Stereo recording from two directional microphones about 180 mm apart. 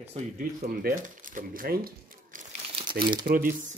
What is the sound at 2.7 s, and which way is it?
Crumpling, 25° right (ahead or behind).